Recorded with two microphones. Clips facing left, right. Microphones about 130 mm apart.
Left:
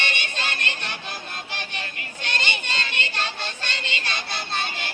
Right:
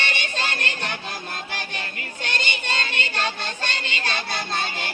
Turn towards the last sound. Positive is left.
turn(degrees=-40)  # may be behind; listen again after turning